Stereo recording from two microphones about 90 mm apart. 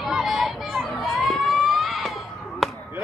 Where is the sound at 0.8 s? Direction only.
Centre (ahead or behind).